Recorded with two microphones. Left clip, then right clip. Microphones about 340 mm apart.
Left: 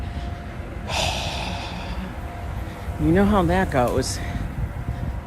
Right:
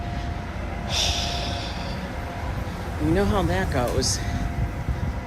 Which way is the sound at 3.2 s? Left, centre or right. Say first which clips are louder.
Left 5 dB; centre.